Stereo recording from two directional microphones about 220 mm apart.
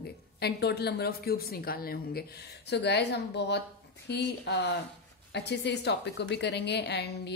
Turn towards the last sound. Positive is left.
turn(degrees=50)  # may be behind; listen again after turning